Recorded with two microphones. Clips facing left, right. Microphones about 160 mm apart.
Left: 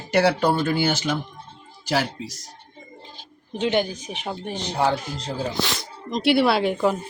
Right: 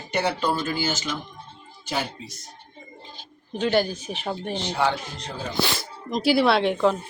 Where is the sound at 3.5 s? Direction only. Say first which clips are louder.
Even; 20° left (ahead or behind).